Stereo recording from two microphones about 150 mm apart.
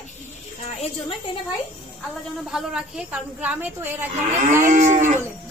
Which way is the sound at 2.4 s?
5° right (ahead or behind).